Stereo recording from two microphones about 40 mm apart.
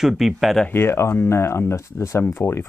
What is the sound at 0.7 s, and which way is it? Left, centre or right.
Speech, left.